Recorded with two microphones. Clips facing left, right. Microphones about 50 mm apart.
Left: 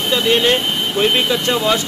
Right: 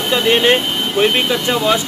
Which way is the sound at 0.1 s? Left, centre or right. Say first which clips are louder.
Right 2 dB; centre.